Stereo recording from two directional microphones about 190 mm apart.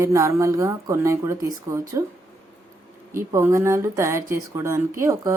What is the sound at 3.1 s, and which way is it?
Speech, 15° right (ahead or behind).